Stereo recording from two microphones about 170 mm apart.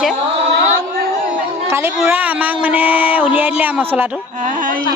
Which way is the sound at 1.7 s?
15° right (ahead or behind).